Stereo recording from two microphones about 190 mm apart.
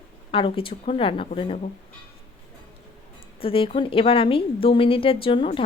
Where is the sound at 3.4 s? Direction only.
30° left (ahead or behind).